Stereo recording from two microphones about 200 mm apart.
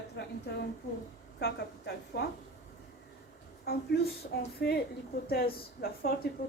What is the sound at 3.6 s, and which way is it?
A woman's voice, 50° left (ahead or behind).